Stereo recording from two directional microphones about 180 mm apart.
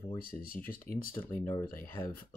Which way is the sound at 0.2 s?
55° left (ahead or behind).